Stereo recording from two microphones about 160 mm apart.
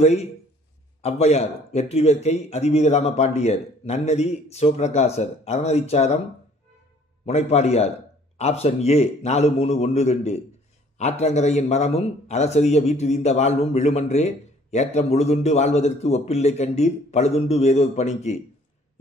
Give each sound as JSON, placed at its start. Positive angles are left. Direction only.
{"t": 0.0, "sound": "a man's voice", "side_deg": 40}
{"t": 7.2, "sound": "a man's voice", "side_deg": 40}